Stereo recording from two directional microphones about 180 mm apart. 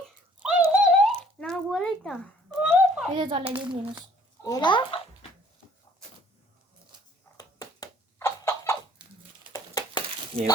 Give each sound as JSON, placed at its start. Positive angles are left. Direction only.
{"t": 0.3, "sound": "a sound", "side_deg": -5}
{"t": 3.2, "sound": "a child's voice", "side_deg": -30}
{"t": 3.5, "sound": "a child's voice", "side_deg": -5}
{"t": 4.4, "sound": "a child's voice", "side_deg": 25}
{"t": 7.3, "sound": "a sound", "side_deg": 20}
{"t": 10.3, "sound": "speech", "side_deg": -30}